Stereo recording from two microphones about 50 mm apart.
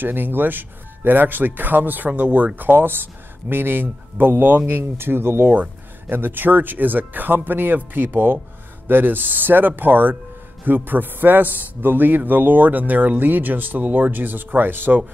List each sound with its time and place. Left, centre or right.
0.0 s speech: right
2.7 s speech: right
5.5 s speech: right